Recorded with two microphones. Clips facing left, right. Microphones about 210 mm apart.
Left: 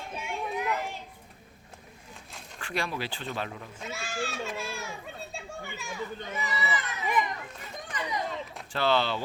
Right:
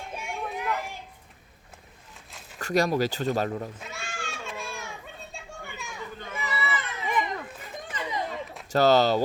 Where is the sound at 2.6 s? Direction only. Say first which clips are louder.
Right 9 dB; 40° right (ahead or behind).